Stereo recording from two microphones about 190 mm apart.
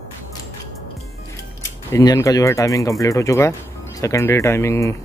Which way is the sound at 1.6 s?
15° left (ahead or behind).